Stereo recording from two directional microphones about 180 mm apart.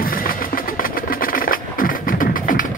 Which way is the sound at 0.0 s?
55° left (ahead or behind).